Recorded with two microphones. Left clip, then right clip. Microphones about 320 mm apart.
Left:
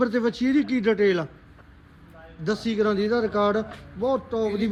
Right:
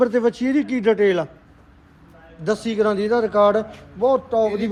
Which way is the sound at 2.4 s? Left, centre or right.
Centre.